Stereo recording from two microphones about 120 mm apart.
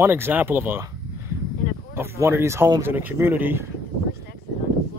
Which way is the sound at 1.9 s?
20° right (ahead or behind).